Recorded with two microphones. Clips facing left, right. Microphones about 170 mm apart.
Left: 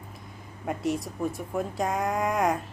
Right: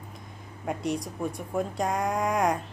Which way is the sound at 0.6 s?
Centre (ahead or behind).